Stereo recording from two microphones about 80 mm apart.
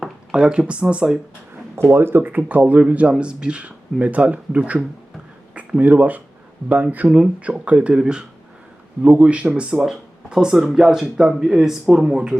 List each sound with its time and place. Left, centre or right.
0.0 s speech: centre
1.7 s speech: right; by 12.4 s centre